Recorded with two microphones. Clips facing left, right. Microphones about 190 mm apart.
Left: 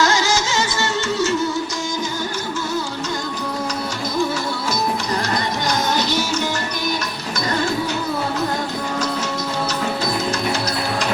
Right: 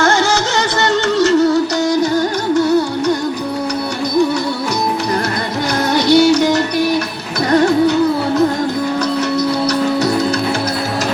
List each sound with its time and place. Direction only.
0.0 s music: 55° right (ahead or behind)
5.9 s music: 65° right (ahead or behind)